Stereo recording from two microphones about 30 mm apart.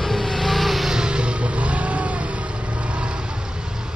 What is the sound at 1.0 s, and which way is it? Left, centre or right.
Vehicle, right.